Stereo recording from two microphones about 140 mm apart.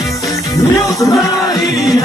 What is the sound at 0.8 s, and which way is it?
Speech, 20° left (ahead or behind).